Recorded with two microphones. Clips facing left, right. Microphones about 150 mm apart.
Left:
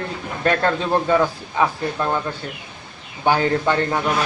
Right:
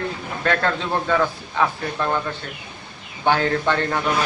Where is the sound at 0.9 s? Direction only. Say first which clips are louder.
Left 4 dB; 15° left (ahead or behind).